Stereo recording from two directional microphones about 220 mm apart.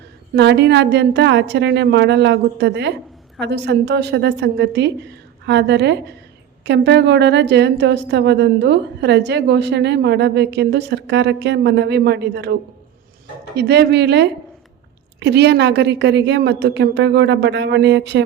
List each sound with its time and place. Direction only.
0.3 s a woman's voice: 50° right (ahead or behind)
13.6 s a woman's voice: 50° right (ahead or behind)